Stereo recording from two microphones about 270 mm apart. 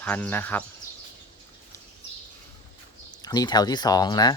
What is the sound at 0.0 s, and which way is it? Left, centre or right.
Speech, centre.